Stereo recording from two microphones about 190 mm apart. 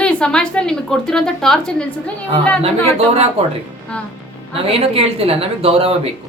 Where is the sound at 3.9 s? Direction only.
5° left (ahead or behind).